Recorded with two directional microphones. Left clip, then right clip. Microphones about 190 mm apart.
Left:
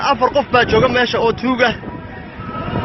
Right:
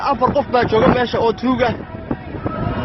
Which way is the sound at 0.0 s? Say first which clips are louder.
Left 2 dB; centre (ahead or behind).